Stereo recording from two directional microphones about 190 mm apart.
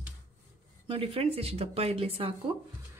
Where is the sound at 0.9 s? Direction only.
30° right (ahead or behind).